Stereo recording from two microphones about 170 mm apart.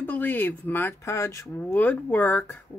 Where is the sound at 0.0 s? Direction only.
10° left (ahead or behind).